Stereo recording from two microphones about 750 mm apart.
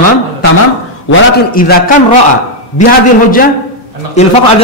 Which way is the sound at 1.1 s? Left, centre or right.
Centre.